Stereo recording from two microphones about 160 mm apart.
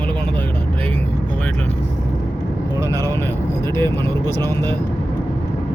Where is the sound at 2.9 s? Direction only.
20° right (ahead or behind).